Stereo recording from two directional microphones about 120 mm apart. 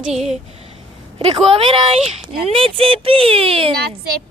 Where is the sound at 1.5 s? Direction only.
50° right (ahead or behind).